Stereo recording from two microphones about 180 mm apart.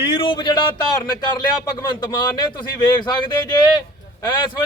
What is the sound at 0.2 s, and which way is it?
Speech, 25° left (ahead or behind).